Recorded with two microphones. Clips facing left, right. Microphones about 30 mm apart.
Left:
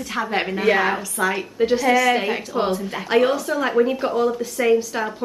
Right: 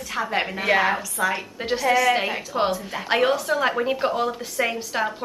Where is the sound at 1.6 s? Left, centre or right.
Centre.